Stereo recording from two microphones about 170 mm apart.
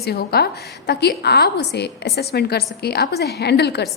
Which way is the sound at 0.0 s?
65° left (ahead or behind).